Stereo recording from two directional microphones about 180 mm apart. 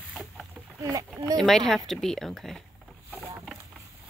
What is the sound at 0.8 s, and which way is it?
Speech, 20° right (ahead or behind).